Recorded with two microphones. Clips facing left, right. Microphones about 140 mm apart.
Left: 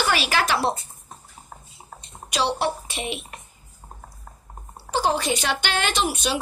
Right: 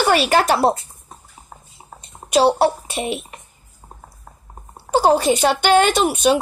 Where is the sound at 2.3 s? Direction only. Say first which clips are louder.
Right 9 dB; 45° right (ahead or behind).